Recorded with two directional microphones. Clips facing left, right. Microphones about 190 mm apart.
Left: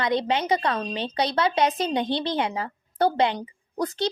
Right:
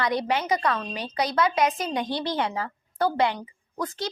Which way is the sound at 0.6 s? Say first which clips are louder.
Left 1 dB; 35° left (ahead or behind).